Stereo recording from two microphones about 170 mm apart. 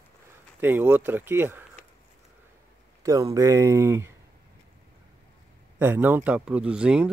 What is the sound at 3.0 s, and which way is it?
Speech, 20° right (ahead or behind).